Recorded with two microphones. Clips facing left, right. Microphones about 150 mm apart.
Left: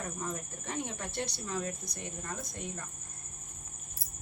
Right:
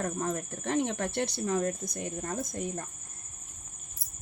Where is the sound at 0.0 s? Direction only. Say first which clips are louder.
Right 7 dB; 60° right (ahead or behind); by 2.8 s 45° right (ahead or behind).